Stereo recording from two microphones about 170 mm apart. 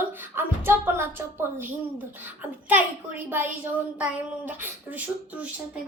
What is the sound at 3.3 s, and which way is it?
A child's voice, 10° right (ahead or behind).